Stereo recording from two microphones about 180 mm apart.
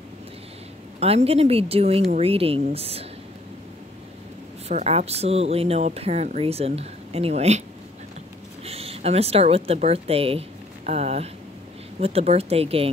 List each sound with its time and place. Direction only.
0.9 s speech: 35° right (ahead or behind)
4.6 s speech: 35° right (ahead or behind)
8.6 s a sound: 35° right (ahead or behind)
9.7 s speech: 35° right (ahead or behind)